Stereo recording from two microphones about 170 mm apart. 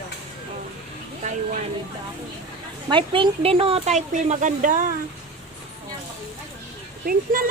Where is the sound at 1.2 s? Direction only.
45° right (ahead or behind).